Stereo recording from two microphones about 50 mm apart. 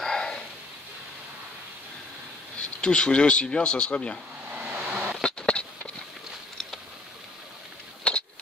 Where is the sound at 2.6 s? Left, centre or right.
Centre.